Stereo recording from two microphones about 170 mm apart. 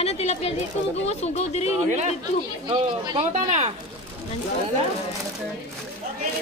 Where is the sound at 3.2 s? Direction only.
45° right (ahead or behind).